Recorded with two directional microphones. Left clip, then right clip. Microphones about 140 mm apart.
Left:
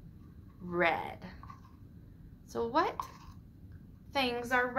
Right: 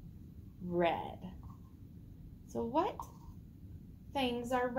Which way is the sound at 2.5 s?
5° right (ahead or behind).